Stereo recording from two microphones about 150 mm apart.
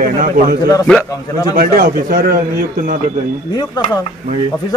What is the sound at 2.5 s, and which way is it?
Speech, 60° right (ahead or behind).